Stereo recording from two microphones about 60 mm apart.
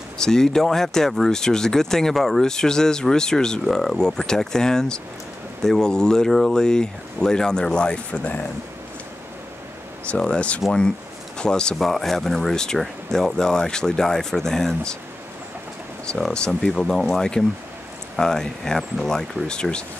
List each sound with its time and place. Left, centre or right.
0.2 s speech: centre
10.0 s speech: centre
11.8 s speech: centre
16.1 s speech: centre